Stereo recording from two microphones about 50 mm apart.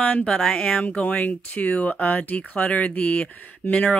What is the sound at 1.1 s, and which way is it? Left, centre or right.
Speech, left.